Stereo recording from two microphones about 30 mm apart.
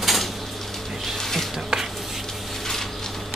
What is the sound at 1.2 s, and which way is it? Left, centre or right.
Music, centre.